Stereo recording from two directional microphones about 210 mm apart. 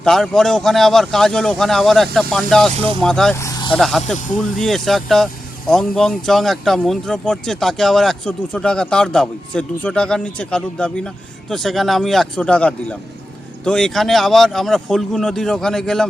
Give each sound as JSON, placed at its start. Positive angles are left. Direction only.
{"t": 0.0, "sound": "speech", "side_deg": 0}
{"t": 2.7, "sound": "speech", "side_deg": -25}
{"t": 3.0, "sound": "speech", "side_deg": 5}
{"t": 3.3, "sound": "vehicle", "side_deg": 15}
{"t": 3.8, "sound": "speech", "side_deg": 0}
{"t": 4.0, "sound": "speech", "side_deg": 35}
{"t": 4.4, "sound": "speech", "side_deg": 0}